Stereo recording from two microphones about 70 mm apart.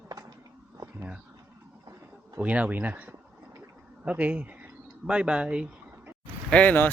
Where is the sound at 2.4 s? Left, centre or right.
Centre.